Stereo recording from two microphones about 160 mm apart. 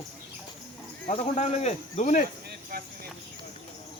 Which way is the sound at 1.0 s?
35° left (ahead or behind).